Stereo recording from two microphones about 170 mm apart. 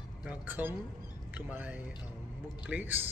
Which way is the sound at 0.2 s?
10° right (ahead or behind).